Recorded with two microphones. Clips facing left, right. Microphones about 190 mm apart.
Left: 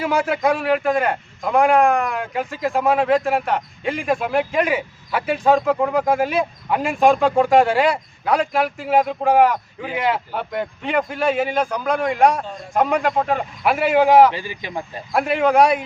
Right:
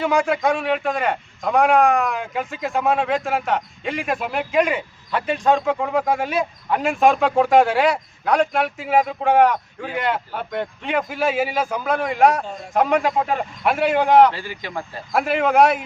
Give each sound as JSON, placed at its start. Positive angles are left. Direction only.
{"t": 0.0, "sound": "a man's voice", "side_deg": 5}
{"t": 14.3, "sound": "speech", "side_deg": 15}
{"t": 15.1, "sound": "a man's voice", "side_deg": 0}